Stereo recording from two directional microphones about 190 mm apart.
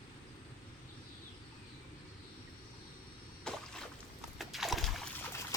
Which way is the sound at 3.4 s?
5° left (ahead or behind).